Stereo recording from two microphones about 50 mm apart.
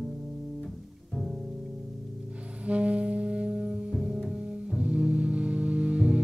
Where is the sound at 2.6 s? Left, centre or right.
Right.